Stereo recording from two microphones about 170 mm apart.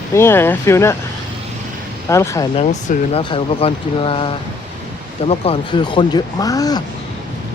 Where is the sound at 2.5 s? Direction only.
40° left (ahead or behind); by 6.8 s 20° left (ahead or behind).